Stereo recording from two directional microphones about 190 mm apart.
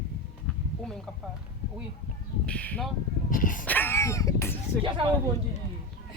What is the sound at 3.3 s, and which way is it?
Speech, 45° left (ahead or behind).